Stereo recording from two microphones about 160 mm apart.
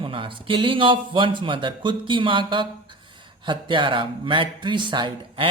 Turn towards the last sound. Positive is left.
turn(degrees=-30)  # may be behind; listen again after turning